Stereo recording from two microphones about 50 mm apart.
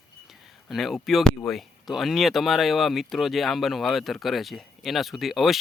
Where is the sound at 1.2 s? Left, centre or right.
Centre.